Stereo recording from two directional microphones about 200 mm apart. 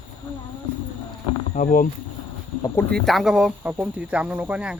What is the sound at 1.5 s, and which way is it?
Speech, 40° left (ahead or behind).